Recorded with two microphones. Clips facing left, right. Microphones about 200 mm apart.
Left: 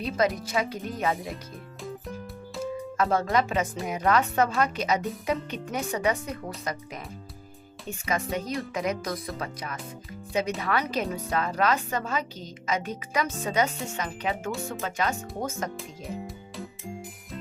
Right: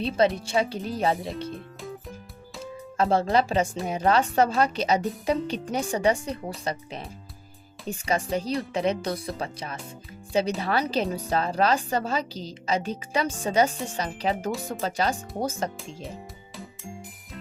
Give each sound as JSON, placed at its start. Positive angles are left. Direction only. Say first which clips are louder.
{"t": 0.3, "sound": "a woman's voice", "louder": "right 3 dB", "side_deg": -30}
{"t": 3.0, "sound": "a woman's voice", "louder": "right 3 dB", "side_deg": -30}
{"t": 7.9, "sound": "a woman's voice", "louder": "right 3 dB", "side_deg": -30}
{"t": 15.8, "sound": "music", "louder": "left 2 dB", "side_deg": 0}